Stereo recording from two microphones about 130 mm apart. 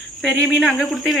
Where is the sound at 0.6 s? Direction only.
Centre (ahead or behind).